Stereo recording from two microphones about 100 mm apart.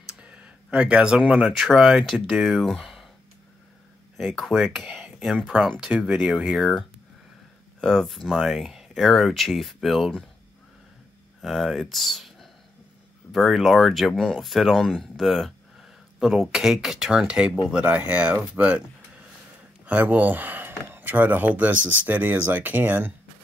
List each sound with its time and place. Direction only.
0.1 s speech: 10° right (ahead or behind)
4.4 s speech: centre (ahead or behind)
11.4 s speech: centre (ahead or behind); by 23.1 s 15° right (ahead or behind)